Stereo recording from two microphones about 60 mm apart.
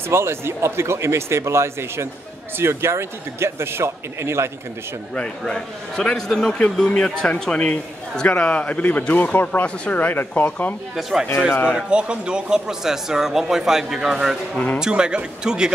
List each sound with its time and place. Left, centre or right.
0.1 s speech: right
5.1 s a man's voice: centre
6.9 s a man's voice: centre
11.0 s speech: centre
11.7 s speech: centre